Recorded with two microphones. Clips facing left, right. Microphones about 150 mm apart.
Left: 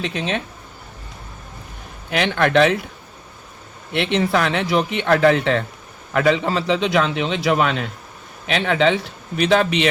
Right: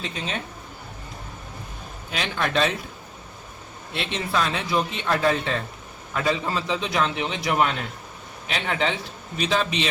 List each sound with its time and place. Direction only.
0.0 s speech: 90° left
2.0 s a man's voice: 65° left (ahead or behind)
3.9 s a man's voice: 65° left (ahead or behind); by 9.0 s 90° left
9.4 s a man's voice: 65° left (ahead or behind)